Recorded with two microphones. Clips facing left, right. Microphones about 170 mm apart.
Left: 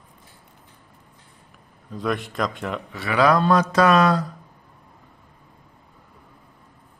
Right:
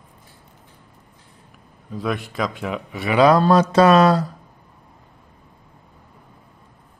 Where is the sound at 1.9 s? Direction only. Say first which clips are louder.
Even; centre (ahead or behind).